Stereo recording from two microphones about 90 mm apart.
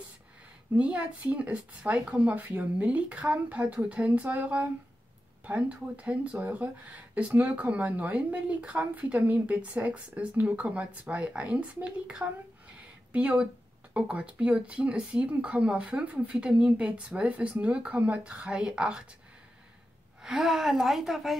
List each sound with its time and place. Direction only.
0.7 s speech: 10° right (ahead or behind)
20.2 s a woman's voice: 5° right (ahead or behind)